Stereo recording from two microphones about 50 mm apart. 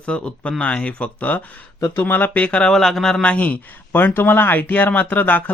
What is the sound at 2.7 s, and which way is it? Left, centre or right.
Speech, centre.